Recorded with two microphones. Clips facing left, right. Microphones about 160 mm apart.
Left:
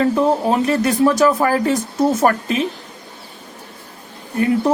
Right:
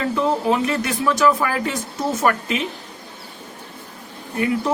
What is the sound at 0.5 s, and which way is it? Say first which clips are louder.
Speech: left 4 dB; 35° left (ahead or behind).